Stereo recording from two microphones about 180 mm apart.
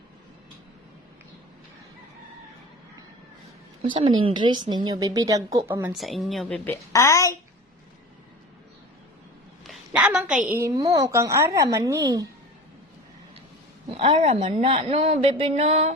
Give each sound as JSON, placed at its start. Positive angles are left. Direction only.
{"t": 3.8, "sound": "speech", "side_deg": -25}
{"t": 5.9, "sound": "a woman's voice", "side_deg": 0}
{"t": 6.7, "sound": "a woman's voice", "side_deg": 15}
{"t": 9.6, "sound": "a sound", "side_deg": -5}
{"t": 10.6, "sound": "speech", "side_deg": -20}
{"t": 13.9, "sound": "a woman's voice", "side_deg": -30}